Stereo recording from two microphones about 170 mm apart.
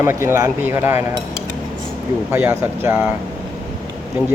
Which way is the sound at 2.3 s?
10° right (ahead or behind).